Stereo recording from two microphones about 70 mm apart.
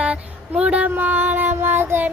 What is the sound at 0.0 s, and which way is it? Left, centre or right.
Child singing, centre.